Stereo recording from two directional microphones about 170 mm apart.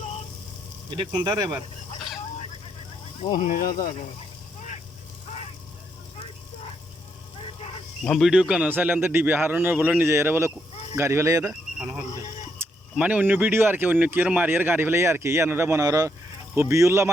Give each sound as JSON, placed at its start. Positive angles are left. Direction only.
{"t": 1.2, "sound": "speech", "side_deg": -25}
{"t": 3.3, "sound": "speech", "side_deg": 50}
{"t": 8.0, "sound": "speech", "side_deg": 0}
{"t": 12.5, "sound": "speech", "side_deg": -10}